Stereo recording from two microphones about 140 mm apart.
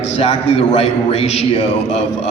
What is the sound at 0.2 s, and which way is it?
A man's voice, 45° left (ahead or behind).